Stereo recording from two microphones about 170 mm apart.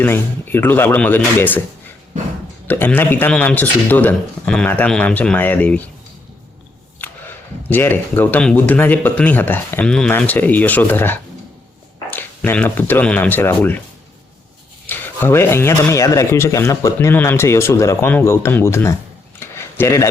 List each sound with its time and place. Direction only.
0.0 s speech: 10° left (ahead or behind)
2.6 s speech: 10° left (ahead or behind)
7.7 s speech: 10° left (ahead or behind)
14.8 s speech: 10° left (ahead or behind)
19.4 s a sound: 15° left (ahead or behind)